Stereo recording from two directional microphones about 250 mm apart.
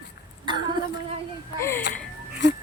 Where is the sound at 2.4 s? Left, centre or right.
Left.